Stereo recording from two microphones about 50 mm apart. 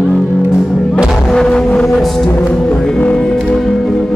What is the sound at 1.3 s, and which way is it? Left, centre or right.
Music, centre.